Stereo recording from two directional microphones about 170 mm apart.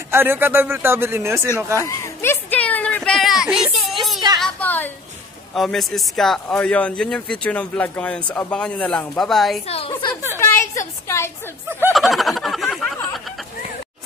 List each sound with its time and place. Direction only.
0.1 s a man's voice: 10° right (ahead or behind)
1.8 s a sound: 15° left (ahead or behind); by 3.8 s 5° right (ahead or behind)
4.4 s a sound: 10° left (ahead or behind)
5.5 s speech: centre (ahead or behind)
9.7 s a woman's voice: 35° left (ahead or behind)
10.4 s a woman's voice: 15° left (ahead or behind)
11.9 s snicker: centre (ahead or behind)